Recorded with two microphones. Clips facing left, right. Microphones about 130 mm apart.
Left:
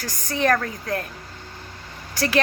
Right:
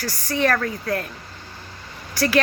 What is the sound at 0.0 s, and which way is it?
A woman's voice, 20° left (ahead or behind).